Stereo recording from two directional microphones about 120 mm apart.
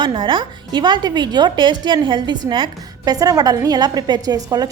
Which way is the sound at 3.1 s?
30° right (ahead or behind).